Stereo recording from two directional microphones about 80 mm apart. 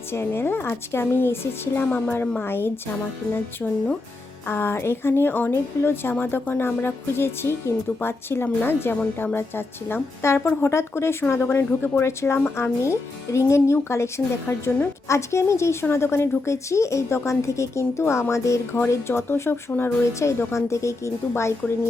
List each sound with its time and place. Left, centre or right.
0.1 s a woman's voice: left
4.4 s a woman's voice: left
14.4 s a woman's voice: left
15.0 s a woman's voice: left